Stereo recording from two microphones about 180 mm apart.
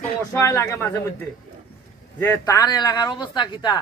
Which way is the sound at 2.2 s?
15° left (ahead or behind).